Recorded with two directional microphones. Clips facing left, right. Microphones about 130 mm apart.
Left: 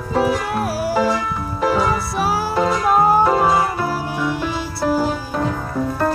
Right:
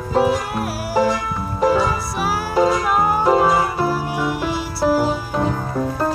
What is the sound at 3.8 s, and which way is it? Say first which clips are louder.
Music: right 1 dB; 15° right (ahead or behind).